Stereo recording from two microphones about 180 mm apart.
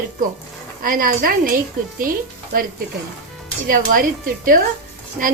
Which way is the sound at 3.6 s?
50° right (ahead or behind).